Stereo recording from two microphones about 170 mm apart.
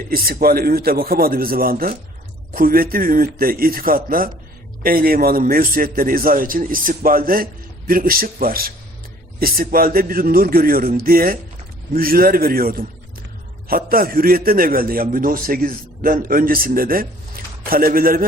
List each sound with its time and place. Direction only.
0.1 s a man's voice: 60° right (ahead or behind)